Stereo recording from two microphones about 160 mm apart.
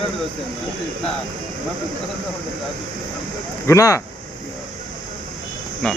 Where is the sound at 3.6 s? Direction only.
20° left (ahead or behind).